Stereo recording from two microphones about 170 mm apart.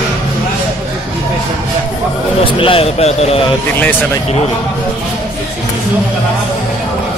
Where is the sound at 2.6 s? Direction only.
35° left (ahead or behind).